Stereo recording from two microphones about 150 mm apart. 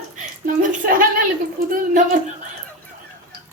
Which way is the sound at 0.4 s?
65° right (ahead or behind).